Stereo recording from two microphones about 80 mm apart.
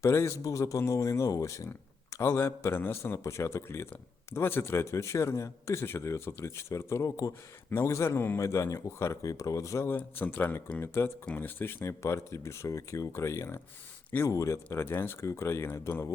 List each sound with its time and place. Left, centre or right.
0.0 s a man's voice: left
8.4 s a man's voice: left